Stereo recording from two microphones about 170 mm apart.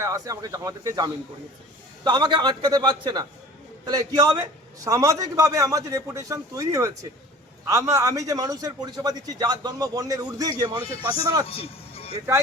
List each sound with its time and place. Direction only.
0.0 s a man's voice: 20° right (ahead or behind)
11.4 s speech: 35° left (ahead or behind)